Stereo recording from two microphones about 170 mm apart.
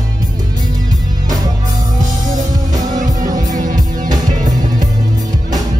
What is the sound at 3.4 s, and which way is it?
Music, 50° right (ahead or behind).